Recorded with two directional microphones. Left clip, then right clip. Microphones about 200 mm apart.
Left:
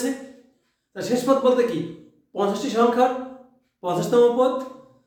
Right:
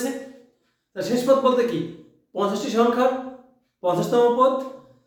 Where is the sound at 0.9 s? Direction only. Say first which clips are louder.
Right 2 dB; 10° left (ahead or behind).